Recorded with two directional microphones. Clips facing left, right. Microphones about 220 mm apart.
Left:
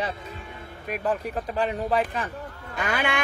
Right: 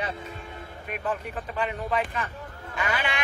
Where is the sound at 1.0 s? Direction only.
35° left (ahead or behind).